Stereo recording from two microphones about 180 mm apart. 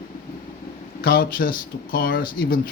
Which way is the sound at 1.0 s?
55° left (ahead or behind).